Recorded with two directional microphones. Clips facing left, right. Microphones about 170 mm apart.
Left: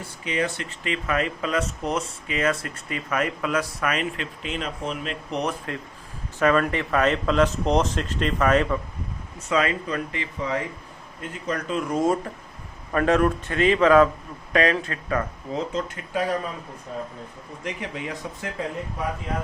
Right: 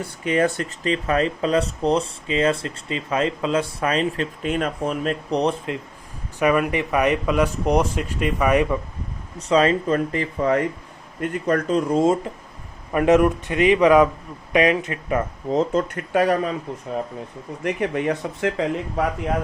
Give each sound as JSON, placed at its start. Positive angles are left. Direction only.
{"t": 0.3, "sound": "speech", "side_deg": -50}
{"t": 4.4, "sound": "speech", "side_deg": -50}
{"t": 5.3, "sound": "speech", "side_deg": -30}
{"t": 6.4, "sound": "speech", "side_deg": -15}
{"t": 9.5, "sound": "speech", "side_deg": -35}
{"t": 11.7, "sound": "speech", "side_deg": -35}
{"t": 15.5, "sound": "speech", "side_deg": -55}
{"t": 17.6, "sound": "speech", "side_deg": -60}